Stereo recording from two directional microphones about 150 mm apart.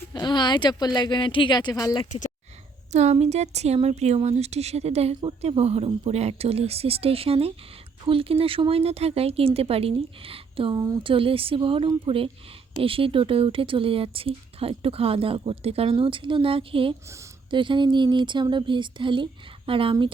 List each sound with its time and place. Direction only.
0.1 s speech: 30° left (ahead or behind)
2.9 s a woman's voice: 50° right (ahead or behind)